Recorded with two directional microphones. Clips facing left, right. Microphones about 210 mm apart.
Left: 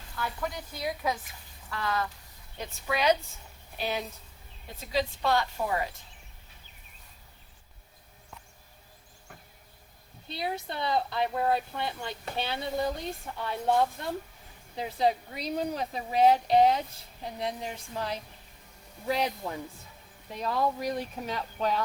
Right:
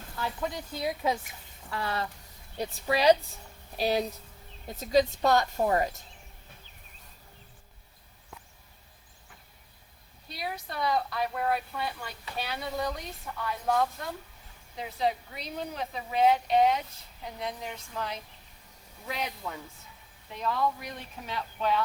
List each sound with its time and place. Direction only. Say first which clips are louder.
0.2 s a woman's voice: right 1 dB; 25° right (ahead or behind); by 5.9 s 45° right (ahead or behind)
10.2 s a woman's voice: left 4 dB; 25° left (ahead or behind); by 21.8 s 40° left (ahead or behind)